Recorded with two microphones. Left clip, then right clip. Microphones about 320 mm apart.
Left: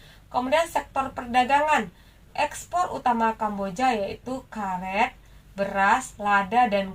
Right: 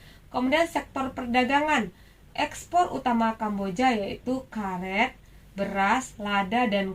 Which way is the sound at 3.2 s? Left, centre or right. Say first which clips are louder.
Left 3 dB; left.